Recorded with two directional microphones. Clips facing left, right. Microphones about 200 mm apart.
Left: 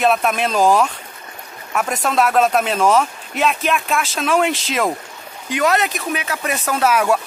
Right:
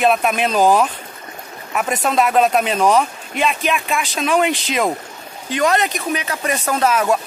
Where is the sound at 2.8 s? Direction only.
15° right (ahead or behind).